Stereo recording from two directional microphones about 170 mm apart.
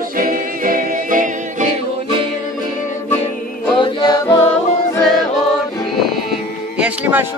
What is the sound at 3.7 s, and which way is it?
Music, 25° left (ahead or behind).